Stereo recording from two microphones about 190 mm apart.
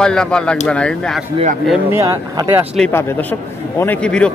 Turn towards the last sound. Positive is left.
turn(degrees=5)  # may be behind; listen again after turning